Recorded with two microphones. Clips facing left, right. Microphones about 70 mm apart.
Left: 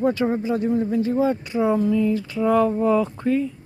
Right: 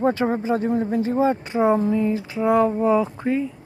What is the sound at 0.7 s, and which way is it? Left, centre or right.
Speech, right.